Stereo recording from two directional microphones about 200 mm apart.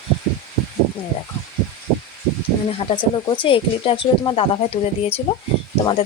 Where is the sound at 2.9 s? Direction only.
25° left (ahead or behind).